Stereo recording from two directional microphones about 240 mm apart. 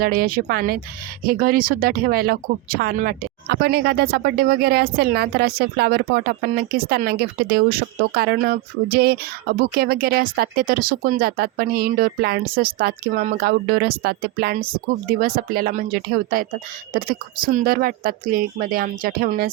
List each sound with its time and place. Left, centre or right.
0.0 s speech: right